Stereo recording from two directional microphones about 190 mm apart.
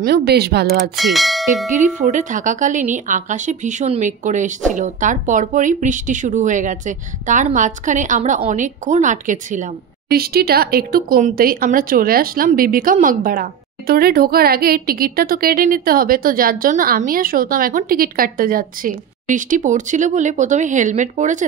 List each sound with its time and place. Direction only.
0.0 s speech: 60° right (ahead or behind)
0.9 s bell: centre (ahead or behind)
1.7 s speech: 40° right (ahead or behind)